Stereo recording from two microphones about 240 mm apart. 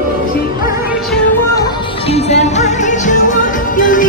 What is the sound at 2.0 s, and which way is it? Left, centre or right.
Music, left.